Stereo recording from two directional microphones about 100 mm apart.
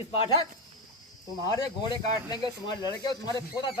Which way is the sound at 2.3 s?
45° left (ahead or behind).